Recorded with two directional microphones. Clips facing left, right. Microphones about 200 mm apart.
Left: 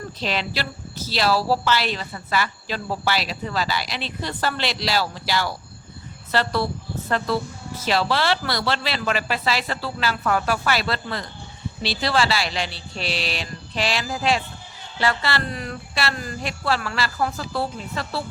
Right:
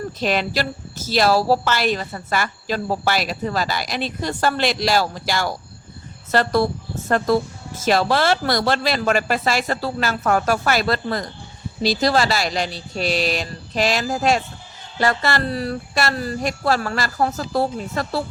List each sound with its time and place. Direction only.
0.2 s a woman's voice: 50° right (ahead or behind)